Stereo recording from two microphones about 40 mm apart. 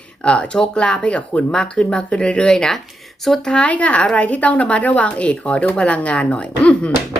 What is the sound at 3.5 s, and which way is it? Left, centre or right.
Speech, left.